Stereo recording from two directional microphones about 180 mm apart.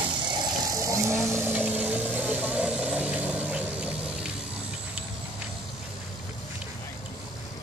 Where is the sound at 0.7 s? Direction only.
15° right (ahead or behind).